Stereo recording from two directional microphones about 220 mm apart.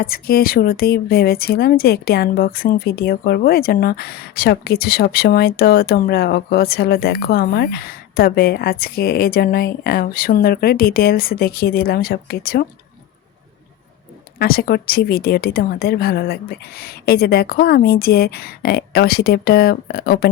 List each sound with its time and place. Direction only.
0.0 s speech: 45° left (ahead or behind)
14.3 s speech: 45° left (ahead or behind)